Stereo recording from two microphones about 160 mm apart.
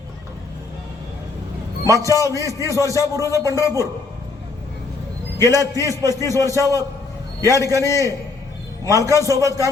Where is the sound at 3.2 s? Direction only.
20° left (ahead or behind).